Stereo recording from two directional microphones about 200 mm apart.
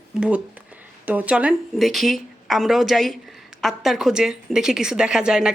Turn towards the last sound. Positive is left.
turn(degrees=-5)  # may be behind; listen again after turning